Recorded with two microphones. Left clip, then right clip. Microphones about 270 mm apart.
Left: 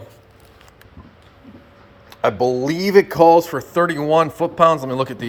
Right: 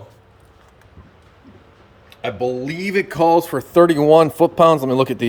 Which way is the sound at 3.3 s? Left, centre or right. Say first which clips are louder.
Left 1 dB; right.